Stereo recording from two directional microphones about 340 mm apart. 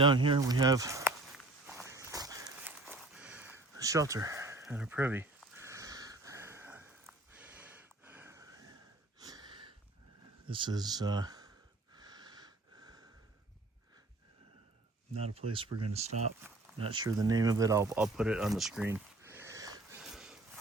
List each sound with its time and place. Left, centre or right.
0.0 s speech: centre
1.6 s walk: centre
9.2 s a sound: centre
10.5 s speech: centre
11.9 s wheeze: centre
15.4 s speech: centre
16.4 s speech: centre